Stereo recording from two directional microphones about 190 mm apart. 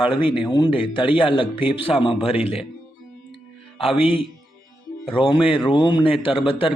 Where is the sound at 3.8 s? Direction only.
30° left (ahead or behind).